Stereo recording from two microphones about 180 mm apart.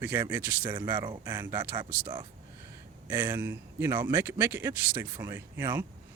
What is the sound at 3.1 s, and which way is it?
Speech, 10° right (ahead or behind).